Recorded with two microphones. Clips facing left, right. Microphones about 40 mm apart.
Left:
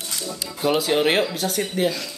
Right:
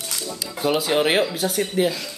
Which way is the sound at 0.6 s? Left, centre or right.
Centre.